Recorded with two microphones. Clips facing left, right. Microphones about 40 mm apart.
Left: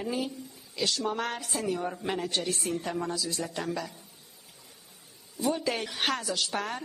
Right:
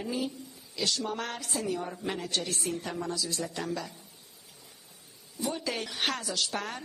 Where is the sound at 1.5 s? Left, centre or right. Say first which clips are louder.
Even; left.